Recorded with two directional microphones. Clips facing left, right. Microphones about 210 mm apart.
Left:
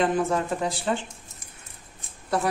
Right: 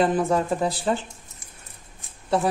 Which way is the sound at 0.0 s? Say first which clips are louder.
Right 2 dB; 35° right (ahead or behind).